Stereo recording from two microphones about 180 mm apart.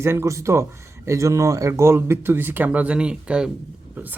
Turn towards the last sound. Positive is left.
turn(degrees=-10)  # may be behind; listen again after turning